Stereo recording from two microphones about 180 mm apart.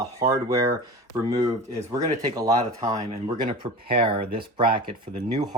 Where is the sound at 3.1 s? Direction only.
30° right (ahead or behind).